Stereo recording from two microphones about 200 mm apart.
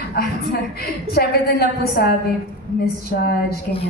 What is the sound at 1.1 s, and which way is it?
A woman's voice, 50° left (ahead or behind).